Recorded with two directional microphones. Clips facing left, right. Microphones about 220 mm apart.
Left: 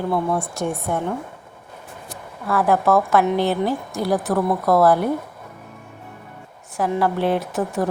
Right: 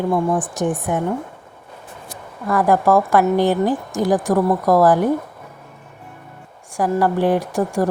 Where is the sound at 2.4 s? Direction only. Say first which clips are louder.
Right 2 dB; 15° right (ahead or behind).